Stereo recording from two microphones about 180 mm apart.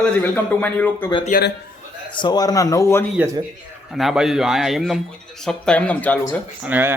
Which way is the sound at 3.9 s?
Centre (ahead or behind).